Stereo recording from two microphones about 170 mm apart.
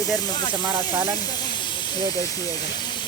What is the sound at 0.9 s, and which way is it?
Speech, 10° right (ahead or behind).